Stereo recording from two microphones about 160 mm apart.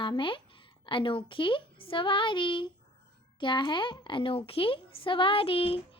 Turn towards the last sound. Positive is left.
turn(degrees=35)  # may be behind; listen again after turning